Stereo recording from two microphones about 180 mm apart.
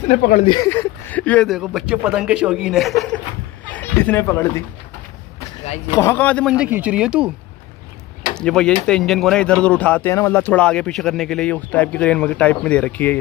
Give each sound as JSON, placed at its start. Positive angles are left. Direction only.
{"t": 0.1, "sound": "speech", "side_deg": 50}
{"t": 0.5, "sound": "a man's voice", "side_deg": 15}
{"t": 5.9, "sound": "speech", "side_deg": 15}
{"t": 6.5, "sound": "a man's voice", "side_deg": -10}
{"t": 8.4, "sound": "speech", "side_deg": 5}